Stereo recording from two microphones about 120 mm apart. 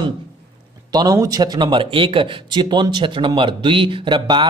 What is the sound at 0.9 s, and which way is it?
Speech, 30° right (ahead or behind).